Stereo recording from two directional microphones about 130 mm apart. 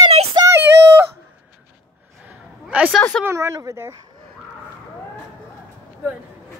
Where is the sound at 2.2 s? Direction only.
10° right (ahead or behind).